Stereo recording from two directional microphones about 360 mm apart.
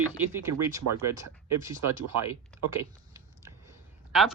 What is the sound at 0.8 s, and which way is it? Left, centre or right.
Speech, right.